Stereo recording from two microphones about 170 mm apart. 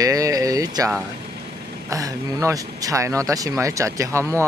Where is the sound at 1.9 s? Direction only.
20° right (ahead or behind).